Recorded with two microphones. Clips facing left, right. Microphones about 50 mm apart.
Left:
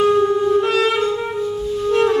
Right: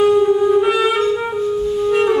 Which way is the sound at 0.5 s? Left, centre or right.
Centre.